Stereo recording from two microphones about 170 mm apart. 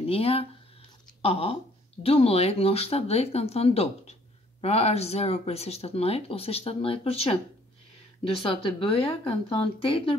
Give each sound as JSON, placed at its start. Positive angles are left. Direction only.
{"t": 0.0, "sound": "speech", "side_deg": 35}